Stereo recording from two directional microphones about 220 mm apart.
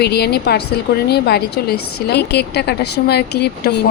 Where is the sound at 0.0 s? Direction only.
45° left (ahead or behind).